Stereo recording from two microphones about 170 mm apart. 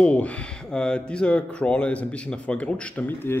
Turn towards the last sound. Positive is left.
turn(degrees=10)  # may be behind; listen again after turning